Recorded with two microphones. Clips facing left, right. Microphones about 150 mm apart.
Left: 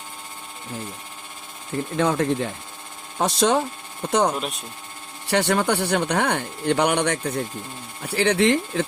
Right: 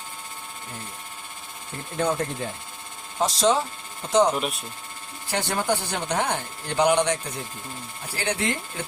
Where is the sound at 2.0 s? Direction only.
90° left.